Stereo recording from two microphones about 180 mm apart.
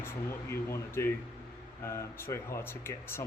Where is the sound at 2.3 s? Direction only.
20° left (ahead or behind).